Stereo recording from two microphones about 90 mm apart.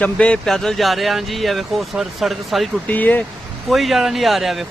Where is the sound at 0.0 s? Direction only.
10° left (ahead or behind).